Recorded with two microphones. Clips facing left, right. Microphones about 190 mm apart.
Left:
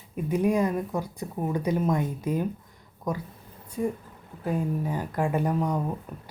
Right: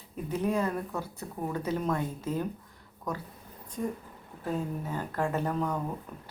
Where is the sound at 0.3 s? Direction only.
10° left (ahead or behind).